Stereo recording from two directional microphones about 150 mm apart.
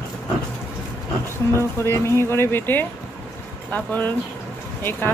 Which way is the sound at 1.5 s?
20° left (ahead or behind).